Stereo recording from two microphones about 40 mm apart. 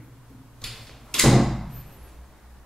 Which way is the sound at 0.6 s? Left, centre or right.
Centre.